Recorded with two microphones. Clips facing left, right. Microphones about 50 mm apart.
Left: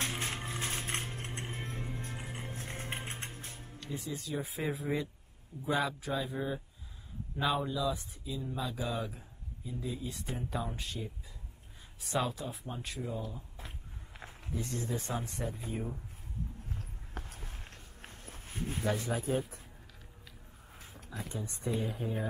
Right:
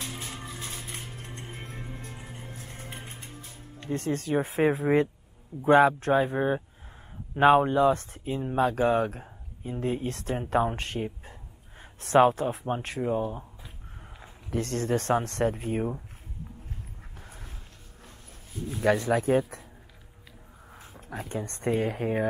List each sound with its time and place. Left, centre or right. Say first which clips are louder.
0.0 s mechanisms: left 2 dB; left
0.7 s a sound: left 2 dB; left
1.5 s music: even; right
2.0 s music: even; left
3.9 s speech: right 11 dB; right
14.5 s speech: right 9 dB; right
17.2 s a sound: right 2 dB; right
18.0 s walk: left 2 dB; left
18.9 s speech: right 11 dB; right
21.1 s speech: right 7 dB; right